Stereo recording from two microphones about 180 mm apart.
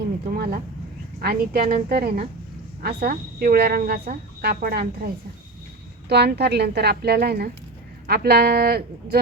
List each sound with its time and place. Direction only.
0.3 s a woman's voice: 55° right (ahead or behind)
6.1 s a woman's voice: 65° right (ahead or behind)